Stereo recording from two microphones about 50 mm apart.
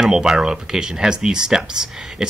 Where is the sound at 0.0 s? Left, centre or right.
Centre.